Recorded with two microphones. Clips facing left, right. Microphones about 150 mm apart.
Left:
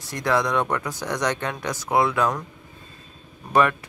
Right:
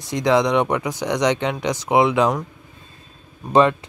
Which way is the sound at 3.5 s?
25° right (ahead or behind).